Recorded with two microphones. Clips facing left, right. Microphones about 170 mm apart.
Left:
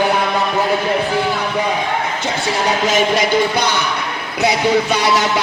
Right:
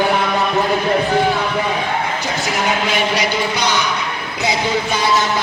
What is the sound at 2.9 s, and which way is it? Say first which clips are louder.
Speech: left 3 dB; 45° left (ahead or behind).